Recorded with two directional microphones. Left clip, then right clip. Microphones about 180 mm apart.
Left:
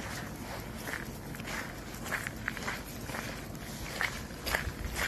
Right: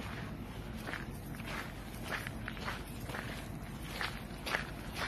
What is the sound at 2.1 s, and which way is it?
Walk, 50° left (ahead or behind).